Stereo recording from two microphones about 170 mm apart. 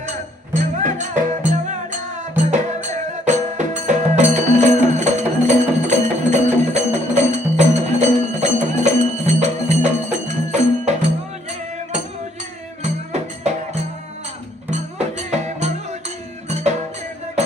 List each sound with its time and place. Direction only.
0.5 s music: 50° right (ahead or behind)
12.8 s music: 40° right (ahead or behind)
14.7 s music: 40° right (ahead or behind)